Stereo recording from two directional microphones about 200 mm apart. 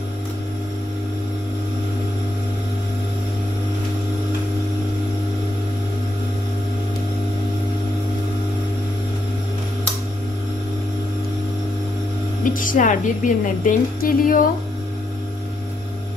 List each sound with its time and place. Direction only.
12.4 s a woman's voice: 40° left (ahead or behind)